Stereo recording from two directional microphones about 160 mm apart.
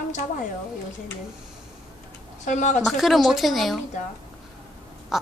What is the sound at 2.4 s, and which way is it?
Speech, 50° left (ahead or behind).